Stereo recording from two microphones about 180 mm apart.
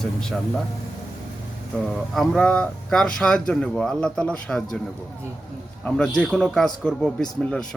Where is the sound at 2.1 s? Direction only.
5° left (ahead or behind).